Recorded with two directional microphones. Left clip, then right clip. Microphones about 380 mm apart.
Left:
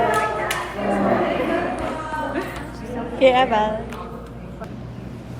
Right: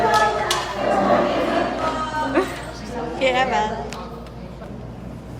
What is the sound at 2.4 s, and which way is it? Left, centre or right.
Music, centre.